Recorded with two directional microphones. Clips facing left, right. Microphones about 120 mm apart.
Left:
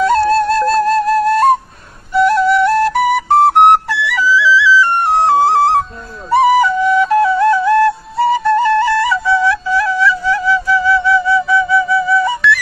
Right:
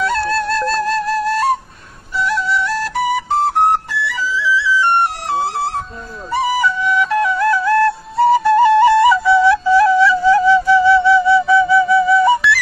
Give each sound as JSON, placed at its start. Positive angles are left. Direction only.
{"t": 0.0, "sound": "music", "side_deg": 40}
{"t": 2.1, "sound": "flute", "side_deg": 50}
{"t": 6.3, "sound": "flute", "side_deg": 50}
{"t": 8.2, "sound": "flute", "side_deg": 0}
{"t": 9.5, "sound": "music", "side_deg": -25}